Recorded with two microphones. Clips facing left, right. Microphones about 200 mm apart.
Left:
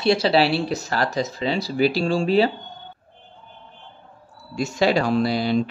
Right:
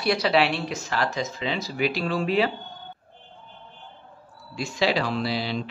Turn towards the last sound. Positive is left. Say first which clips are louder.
# left 7 dB
turn(degrees=45)  # may be behind; listen again after turning